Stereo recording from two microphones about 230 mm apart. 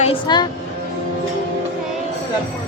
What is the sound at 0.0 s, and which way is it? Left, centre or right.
Speech, left.